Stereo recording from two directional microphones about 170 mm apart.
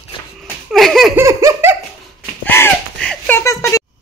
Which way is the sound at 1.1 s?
15° right (ahead or behind).